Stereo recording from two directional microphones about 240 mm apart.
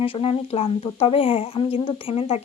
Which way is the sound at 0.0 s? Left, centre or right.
Left.